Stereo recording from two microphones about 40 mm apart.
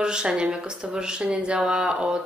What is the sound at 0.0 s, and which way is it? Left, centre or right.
Speech, right.